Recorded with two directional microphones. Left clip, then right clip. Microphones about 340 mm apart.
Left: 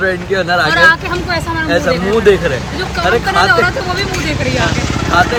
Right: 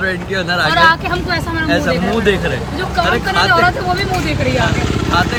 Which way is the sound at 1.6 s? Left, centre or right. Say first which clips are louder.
Left 2 dB; centre.